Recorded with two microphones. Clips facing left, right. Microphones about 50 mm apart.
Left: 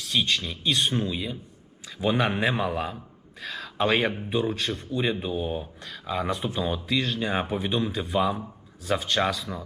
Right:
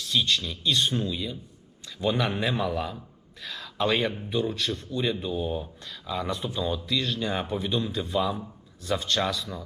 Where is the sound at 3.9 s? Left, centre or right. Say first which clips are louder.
Left 2 dB; left.